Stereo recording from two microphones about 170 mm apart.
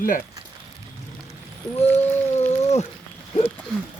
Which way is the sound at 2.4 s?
40° left (ahead or behind).